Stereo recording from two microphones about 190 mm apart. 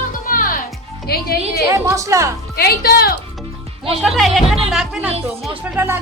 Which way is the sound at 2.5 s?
55° left (ahead or behind).